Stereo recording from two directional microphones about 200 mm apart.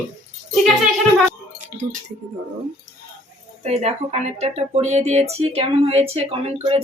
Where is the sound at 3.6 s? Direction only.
35° right (ahead or behind).